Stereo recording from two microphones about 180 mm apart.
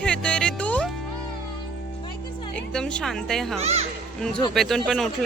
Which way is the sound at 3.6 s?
35° right (ahead or behind).